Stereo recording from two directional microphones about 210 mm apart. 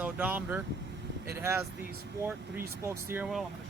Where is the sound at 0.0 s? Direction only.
10° right (ahead or behind).